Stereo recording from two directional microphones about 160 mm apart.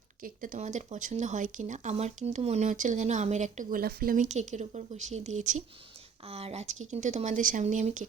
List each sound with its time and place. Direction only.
0.2 s speech: 55° right (ahead or behind)